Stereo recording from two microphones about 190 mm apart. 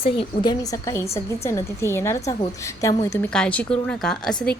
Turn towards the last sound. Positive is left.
turn(degrees=5)  # may be behind; listen again after turning